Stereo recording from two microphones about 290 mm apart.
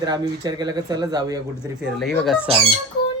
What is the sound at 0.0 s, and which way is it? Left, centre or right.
Speech, centre.